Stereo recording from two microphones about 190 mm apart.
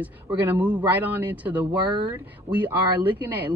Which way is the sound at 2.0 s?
10° right (ahead or behind).